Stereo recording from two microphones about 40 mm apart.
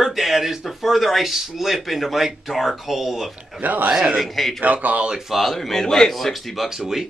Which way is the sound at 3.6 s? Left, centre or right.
Right.